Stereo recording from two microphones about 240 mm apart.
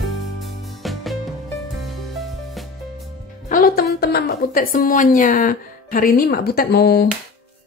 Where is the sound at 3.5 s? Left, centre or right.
Left.